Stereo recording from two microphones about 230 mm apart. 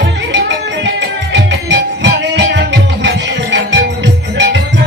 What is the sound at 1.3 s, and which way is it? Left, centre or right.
Music, right.